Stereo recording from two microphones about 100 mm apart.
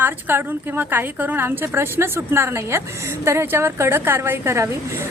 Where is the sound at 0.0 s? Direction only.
20° right (ahead or behind).